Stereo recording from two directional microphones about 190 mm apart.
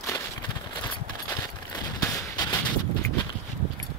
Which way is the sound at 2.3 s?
20° left (ahead or behind).